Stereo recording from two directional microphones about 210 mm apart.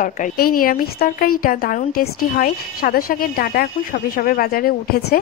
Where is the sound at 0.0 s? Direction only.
40° left (ahead or behind).